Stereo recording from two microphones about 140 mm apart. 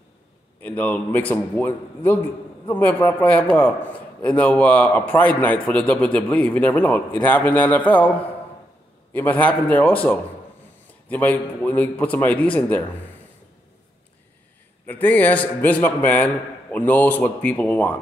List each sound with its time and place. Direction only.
0.6 s a man's voice: 10° left (ahead or behind)
14.9 s a man's voice: 10° left (ahead or behind)